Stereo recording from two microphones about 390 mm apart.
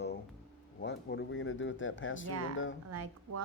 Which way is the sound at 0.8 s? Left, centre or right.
Left.